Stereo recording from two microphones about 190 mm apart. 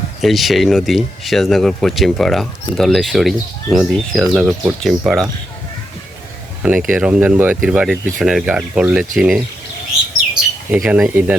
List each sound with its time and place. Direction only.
0.2 s speech: centre (ahead or behind)
6.6 s speech: 5° right (ahead or behind)
10.7 s speech: 5° right (ahead or behind)